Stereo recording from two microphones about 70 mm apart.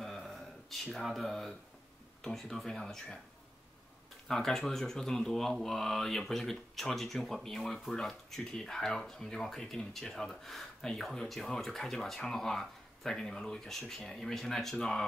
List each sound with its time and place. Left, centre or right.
0.0 s a sound: centre
0.9 s speech: centre
4.3 s speech: centre